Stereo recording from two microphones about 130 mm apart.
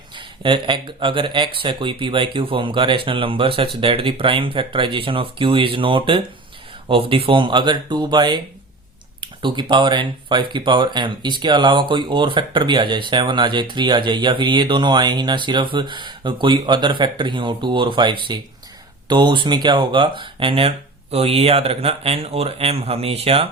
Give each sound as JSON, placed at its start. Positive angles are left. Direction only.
{"t": 0.2, "sound": "speech", "side_deg": -40}